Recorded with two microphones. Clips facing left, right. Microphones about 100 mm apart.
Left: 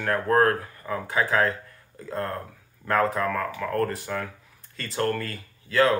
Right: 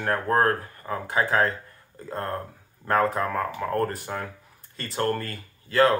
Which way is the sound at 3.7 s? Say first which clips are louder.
Even; 30° right (ahead or behind).